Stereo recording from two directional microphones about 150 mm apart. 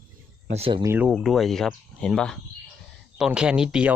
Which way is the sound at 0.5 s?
40° right (ahead or behind).